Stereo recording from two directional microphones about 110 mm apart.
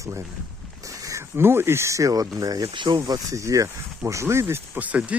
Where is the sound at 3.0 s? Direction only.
30° right (ahead or behind); by 5.1 s 10° right (ahead or behind).